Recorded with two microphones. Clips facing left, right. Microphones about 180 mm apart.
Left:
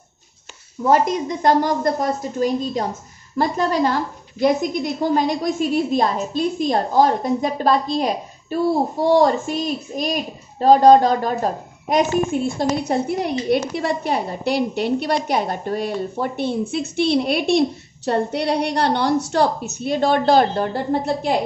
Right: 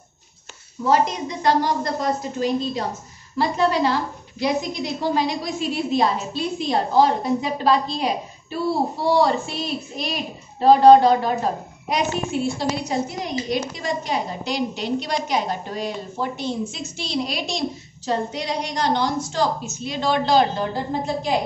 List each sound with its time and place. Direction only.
0.8 s a woman's voice: 50° left (ahead or behind)